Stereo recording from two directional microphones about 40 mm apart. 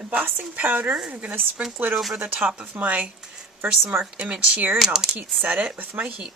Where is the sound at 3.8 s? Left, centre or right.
Right.